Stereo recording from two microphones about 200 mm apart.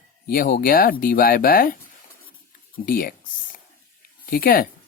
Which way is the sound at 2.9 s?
45° left (ahead or behind).